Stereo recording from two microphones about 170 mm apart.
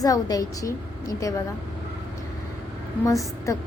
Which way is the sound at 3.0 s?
20° left (ahead or behind).